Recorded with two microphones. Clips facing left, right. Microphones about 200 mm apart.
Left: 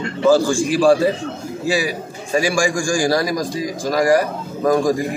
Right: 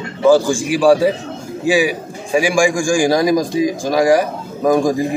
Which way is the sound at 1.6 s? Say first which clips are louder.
Right 5 dB; 15° right (ahead or behind).